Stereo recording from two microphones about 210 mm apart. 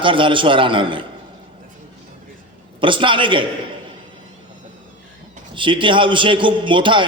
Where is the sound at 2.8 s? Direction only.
25° right (ahead or behind).